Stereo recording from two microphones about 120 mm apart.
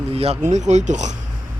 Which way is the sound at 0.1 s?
55° right (ahead or behind).